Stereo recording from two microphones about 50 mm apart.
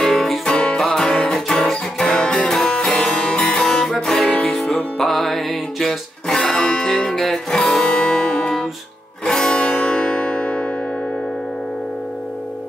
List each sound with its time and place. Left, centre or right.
0.0 s music: centre
9.6 s music: left